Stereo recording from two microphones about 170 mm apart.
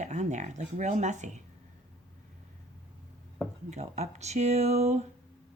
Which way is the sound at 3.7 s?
40° right (ahead or behind).